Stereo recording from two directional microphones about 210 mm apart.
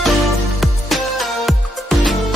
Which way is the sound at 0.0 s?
Centre (ahead or behind).